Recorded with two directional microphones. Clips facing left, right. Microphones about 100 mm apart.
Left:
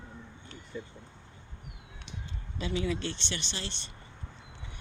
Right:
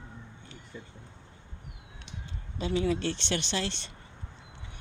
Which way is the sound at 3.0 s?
80° right.